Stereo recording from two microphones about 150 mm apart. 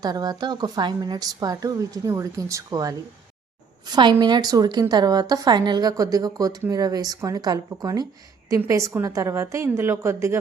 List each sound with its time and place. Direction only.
0.0 s a woman's voice: 25° right (ahead or behind)